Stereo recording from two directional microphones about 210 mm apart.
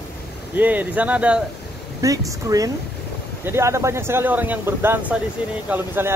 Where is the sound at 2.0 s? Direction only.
15° right (ahead or behind).